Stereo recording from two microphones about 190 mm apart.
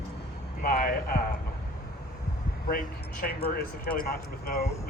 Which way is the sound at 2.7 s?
50° left (ahead or behind).